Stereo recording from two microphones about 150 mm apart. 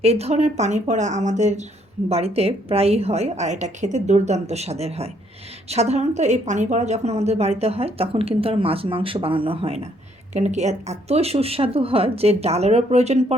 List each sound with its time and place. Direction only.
0.0 s a woman's voice: 45° right (ahead or behind)
10.3 s a woman's voice: 50° right (ahead or behind)